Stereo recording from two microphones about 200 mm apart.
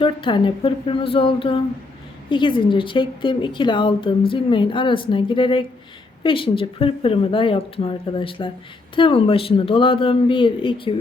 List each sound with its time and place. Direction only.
0.0 s speech: 25° left (ahead or behind)